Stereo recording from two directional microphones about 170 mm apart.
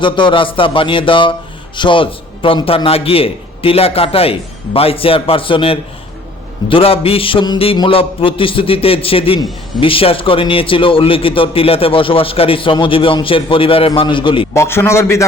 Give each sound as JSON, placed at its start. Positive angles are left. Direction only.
{"t": 0.0, "sound": "speech", "side_deg": 30}
{"t": 14.5, "sound": "a man's voice", "side_deg": 15}